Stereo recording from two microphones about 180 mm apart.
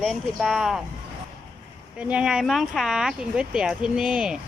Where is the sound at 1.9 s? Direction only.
5° right (ahead or behind).